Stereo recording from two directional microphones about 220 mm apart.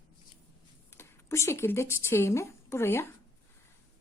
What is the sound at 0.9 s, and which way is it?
Speech, 10° left (ahead or behind).